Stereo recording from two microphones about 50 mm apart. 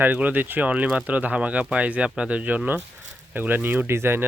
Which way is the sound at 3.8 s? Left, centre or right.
Right.